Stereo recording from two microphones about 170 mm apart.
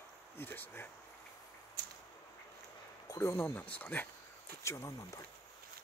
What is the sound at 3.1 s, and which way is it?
Speech, 15° left (ahead or behind).